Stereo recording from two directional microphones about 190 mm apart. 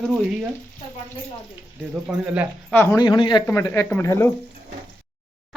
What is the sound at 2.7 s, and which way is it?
A man's voice, 15° left (ahead or behind).